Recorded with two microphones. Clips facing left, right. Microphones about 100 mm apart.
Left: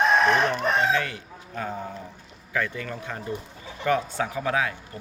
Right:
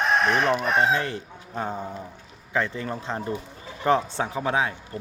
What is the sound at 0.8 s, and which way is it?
Speech, 30° right (ahead or behind).